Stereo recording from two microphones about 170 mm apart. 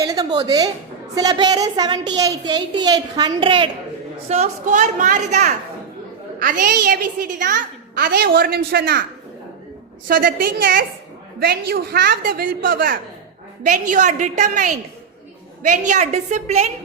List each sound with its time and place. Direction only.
0.0 s a sound: 20° right (ahead or behind)
1.1 s a woman's voice: 20° right (ahead or behind)
4.3 s a woman's voice: 40° right (ahead or behind); by 9.0 s 60° right (ahead or behind)
10.1 s a woman's voice: 55° right (ahead or behind)
11.3 s a woman's voice: 65° right (ahead or behind)
13.7 s a woman's voice: 50° right (ahead or behind)